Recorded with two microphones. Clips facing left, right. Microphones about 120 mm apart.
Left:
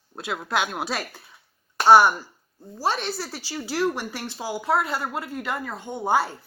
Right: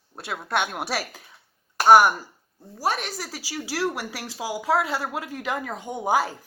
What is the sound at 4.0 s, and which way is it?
Speech, 90° right.